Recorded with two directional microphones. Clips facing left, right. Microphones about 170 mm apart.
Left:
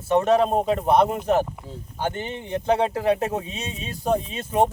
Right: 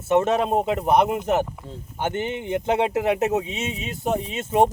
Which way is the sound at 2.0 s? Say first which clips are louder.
Right 2 dB; 20° right (ahead or behind).